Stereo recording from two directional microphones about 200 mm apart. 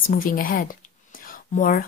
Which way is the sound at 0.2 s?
45° left (ahead or behind).